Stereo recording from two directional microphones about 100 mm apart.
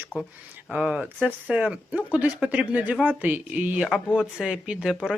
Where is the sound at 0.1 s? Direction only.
10° left (ahead or behind).